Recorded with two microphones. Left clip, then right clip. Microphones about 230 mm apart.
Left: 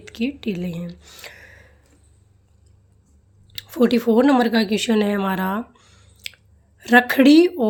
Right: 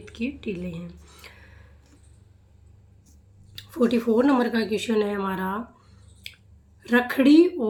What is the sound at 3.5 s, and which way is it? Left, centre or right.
Speech, left.